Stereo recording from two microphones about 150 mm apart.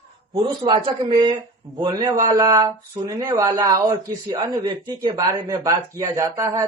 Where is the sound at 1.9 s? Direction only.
25° right (ahead or behind).